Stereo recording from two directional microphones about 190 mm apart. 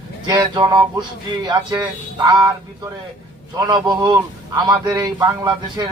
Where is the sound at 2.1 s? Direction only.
20° right (ahead or behind).